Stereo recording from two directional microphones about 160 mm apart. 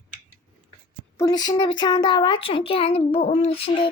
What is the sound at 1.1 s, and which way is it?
A woman's voice, 25° left (ahead or behind).